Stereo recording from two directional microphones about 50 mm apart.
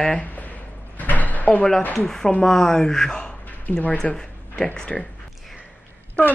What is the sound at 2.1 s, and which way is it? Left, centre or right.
Speech, centre.